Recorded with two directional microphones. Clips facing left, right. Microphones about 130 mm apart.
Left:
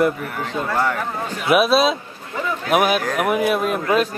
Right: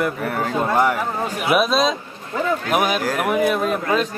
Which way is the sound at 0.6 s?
20° right (ahead or behind).